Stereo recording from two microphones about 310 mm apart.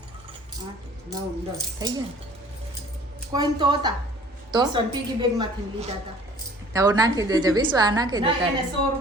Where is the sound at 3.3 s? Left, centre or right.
Centre.